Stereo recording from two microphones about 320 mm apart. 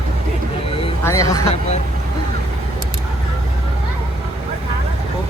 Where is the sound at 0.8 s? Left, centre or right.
Centre.